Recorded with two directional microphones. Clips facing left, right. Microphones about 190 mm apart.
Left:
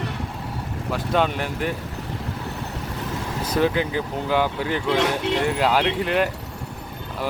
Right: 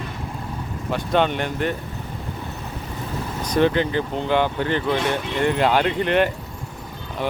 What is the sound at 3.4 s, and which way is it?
Speech, 5° left (ahead or behind).